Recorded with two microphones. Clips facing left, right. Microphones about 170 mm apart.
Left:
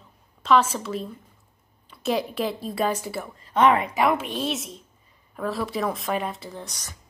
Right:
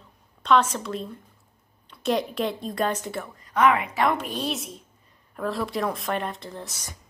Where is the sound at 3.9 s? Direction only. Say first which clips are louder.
Left 2 dB; 10° left (ahead or behind).